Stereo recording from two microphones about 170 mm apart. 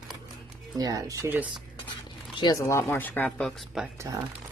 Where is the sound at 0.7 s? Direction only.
20° right (ahead or behind).